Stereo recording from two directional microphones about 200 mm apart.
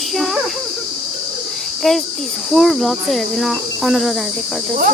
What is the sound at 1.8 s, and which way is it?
Cricket, centre (ahead or behind).